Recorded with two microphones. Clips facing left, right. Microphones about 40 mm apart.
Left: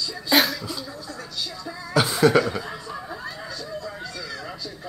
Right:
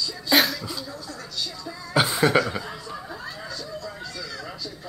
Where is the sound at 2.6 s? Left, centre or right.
Centre.